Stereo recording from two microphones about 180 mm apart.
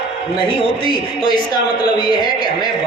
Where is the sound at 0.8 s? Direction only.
25° left (ahead or behind).